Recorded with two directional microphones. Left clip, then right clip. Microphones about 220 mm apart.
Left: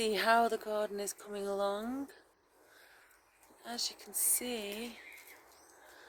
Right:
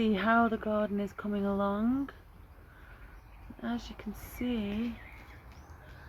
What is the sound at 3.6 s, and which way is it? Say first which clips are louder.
Speech: even; 5° left (ahead or behind).